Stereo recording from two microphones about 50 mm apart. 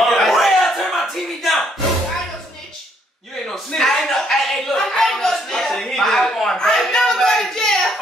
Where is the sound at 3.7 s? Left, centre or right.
Centre.